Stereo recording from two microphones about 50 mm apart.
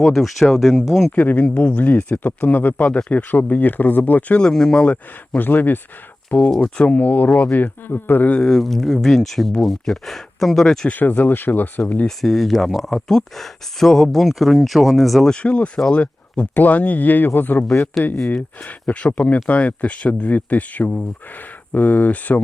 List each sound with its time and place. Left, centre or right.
0.0 s speech: centre
1.1 s speech: left
4.4 s speech: centre
5.4 s speech: left
7.6 s speech: left
8.4 s speech: centre
10.8 s speech: left
12.0 s speech: centre
15.3 s speech: left